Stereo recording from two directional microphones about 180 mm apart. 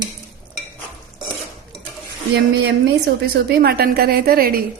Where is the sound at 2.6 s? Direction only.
65° right (ahead or behind).